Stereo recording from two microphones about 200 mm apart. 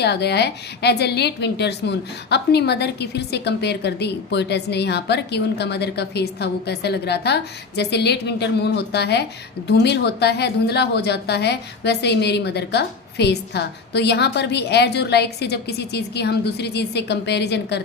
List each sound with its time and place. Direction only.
0.0 s a woman's voice: 55° left (ahead or behind)